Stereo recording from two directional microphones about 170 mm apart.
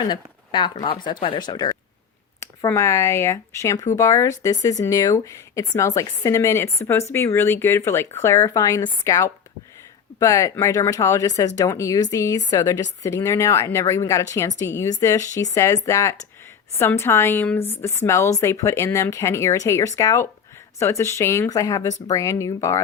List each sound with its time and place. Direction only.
0.0 s a woman's voice: 25° left (ahead or behind)